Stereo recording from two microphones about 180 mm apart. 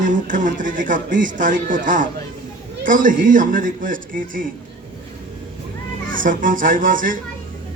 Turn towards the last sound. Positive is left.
turn(degrees=-50)  # may be behind; listen again after turning